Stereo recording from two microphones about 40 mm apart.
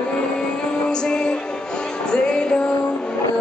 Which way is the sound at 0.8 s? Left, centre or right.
Centre.